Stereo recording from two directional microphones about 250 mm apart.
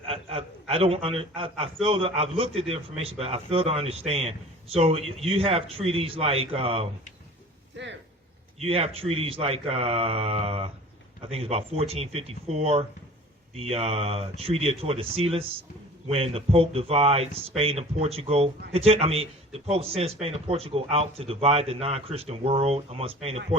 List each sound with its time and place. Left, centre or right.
0.0 s a man's voice: right
7.8 s speech: right
8.5 s a man's voice: right